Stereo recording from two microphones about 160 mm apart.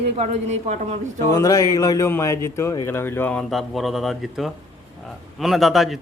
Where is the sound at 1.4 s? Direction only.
20° left (ahead or behind).